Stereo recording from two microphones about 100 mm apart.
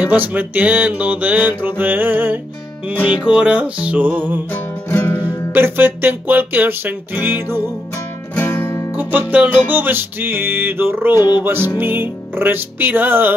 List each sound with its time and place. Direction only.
0.0 s music: 15° right (ahead or behind)
4.8 s music: 20° left (ahead or behind)
5.5 s music: 20° right (ahead or behind)
8.4 s music: 25° left (ahead or behind)
8.9 s music: 15° right (ahead or behind)
11.1 s music: 45° left (ahead or behind)
11.4 s music: 20° right (ahead or behind)